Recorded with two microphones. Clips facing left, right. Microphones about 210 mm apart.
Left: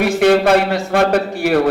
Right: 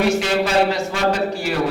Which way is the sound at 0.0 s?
60° left (ahead or behind).